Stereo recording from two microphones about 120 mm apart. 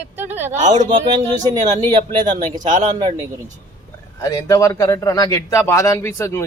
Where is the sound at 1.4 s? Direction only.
35° right (ahead or behind).